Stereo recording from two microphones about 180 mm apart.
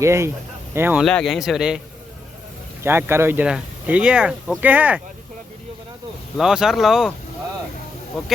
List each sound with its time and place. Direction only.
0.0 s speech: 15° right (ahead or behind)
1.0 s a man's voice: centre (ahead or behind)
2.8 s speech: 15° right (ahead or behind)
6.3 s a man's voice: 5° right (ahead or behind)